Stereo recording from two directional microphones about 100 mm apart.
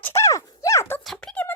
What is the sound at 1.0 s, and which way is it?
Speech, 5° left (ahead or behind).